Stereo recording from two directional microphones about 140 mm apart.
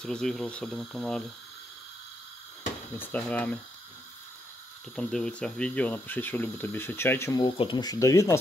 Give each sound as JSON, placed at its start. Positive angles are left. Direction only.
{"t": 0.0, "sound": "speech", "side_deg": 5}
{"t": 3.0, "sound": "speech", "side_deg": 10}
{"t": 4.9, "sound": "speech", "side_deg": 5}
{"t": 7.4, "sound": "speech", "side_deg": 35}